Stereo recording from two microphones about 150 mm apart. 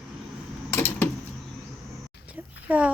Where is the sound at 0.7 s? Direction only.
15° left (ahead or behind).